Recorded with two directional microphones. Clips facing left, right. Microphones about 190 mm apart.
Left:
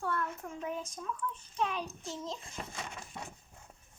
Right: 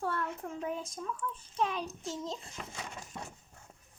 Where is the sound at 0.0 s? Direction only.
30° right (ahead or behind).